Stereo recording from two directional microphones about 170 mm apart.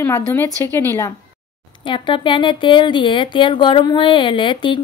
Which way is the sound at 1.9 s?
30° left (ahead or behind).